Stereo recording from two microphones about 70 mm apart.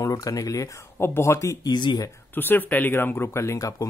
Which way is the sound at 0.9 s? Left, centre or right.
Left.